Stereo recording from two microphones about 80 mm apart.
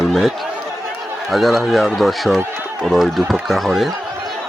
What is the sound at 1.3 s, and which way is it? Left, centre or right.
Speech, centre.